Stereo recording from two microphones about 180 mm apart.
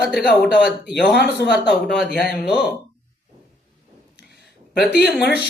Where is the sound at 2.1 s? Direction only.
55° left (ahead or behind).